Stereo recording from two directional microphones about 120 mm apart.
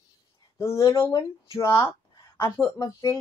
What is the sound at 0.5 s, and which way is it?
Speech, 20° left (ahead or behind).